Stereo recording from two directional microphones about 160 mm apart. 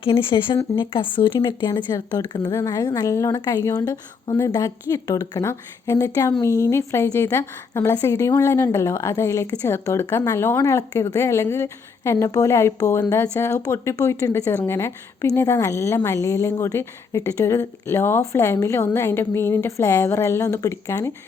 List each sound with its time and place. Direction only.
0.0 s a woman's voice: 35° left (ahead or behind); by 21.1 s 15° left (ahead or behind)